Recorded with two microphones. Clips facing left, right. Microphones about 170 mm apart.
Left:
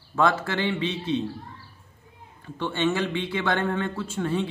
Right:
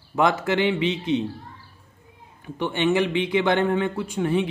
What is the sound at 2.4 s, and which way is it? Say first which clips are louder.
A man's voice: right 2 dB; 20° right (ahead or behind).